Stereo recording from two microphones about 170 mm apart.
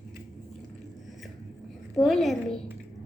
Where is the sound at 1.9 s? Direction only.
Centre (ahead or behind).